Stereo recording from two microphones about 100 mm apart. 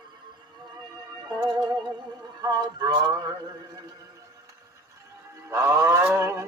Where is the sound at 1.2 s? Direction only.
40° right (ahead or behind).